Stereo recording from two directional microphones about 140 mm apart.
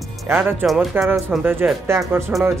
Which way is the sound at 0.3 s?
15° right (ahead or behind).